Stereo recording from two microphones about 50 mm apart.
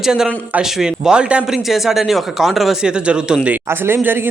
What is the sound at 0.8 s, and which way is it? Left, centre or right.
Speech, centre.